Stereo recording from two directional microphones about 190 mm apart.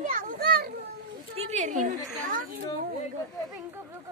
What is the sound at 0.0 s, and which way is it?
Children playing, 45° right (ahead or behind).